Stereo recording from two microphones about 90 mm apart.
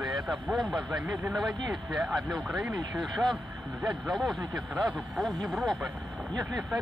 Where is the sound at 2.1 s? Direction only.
50° right (ahead or behind).